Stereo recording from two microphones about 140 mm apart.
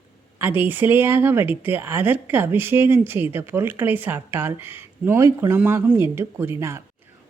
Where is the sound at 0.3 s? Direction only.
15° right (ahead or behind).